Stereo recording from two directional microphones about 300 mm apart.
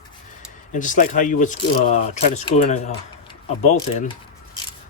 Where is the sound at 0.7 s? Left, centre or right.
Left.